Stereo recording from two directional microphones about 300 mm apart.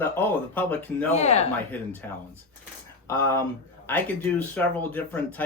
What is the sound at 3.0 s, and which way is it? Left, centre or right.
Speech, centre.